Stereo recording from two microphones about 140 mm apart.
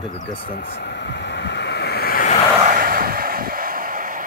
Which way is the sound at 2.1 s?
85° left.